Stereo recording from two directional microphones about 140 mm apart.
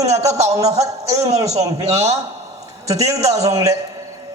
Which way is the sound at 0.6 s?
50° right (ahead or behind).